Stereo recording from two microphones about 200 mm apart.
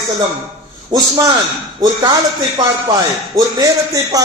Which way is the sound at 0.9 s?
20° right (ahead or behind).